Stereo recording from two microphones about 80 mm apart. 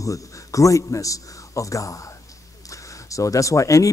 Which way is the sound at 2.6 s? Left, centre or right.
Left.